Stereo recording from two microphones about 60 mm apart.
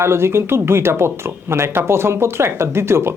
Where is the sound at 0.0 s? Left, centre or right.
Right.